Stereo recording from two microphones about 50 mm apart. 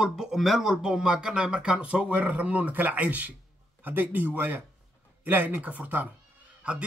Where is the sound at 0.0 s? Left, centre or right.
Centre.